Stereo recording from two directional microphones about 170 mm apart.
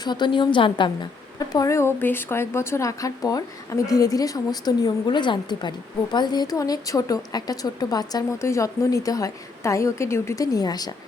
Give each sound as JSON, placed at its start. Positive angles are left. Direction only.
{"t": 0.0, "sound": "a woman's voice", "side_deg": 25}
{"t": 1.5, "sound": "a woman's voice", "side_deg": 15}